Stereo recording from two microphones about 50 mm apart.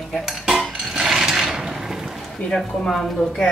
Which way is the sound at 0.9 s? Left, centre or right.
Centre.